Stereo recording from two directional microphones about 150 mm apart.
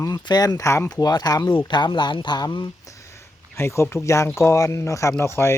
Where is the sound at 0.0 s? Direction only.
25° left (ahead or behind).